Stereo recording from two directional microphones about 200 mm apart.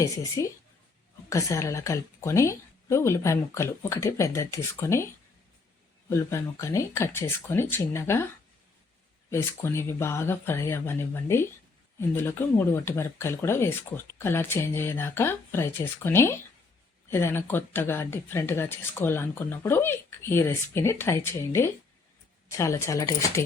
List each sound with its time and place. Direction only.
0.0 s speech: 15° left (ahead or behind)
6.1 s speech: 15° left (ahead or behind)
9.3 s speech: 15° left (ahead or behind)